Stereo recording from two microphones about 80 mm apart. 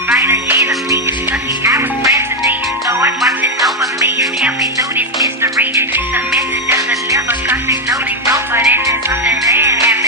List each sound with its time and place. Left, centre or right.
0.2 s music: right
4.9 s music: right
6.7 s music: right